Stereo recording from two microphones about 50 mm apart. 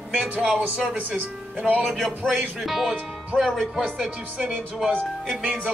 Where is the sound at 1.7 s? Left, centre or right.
Centre.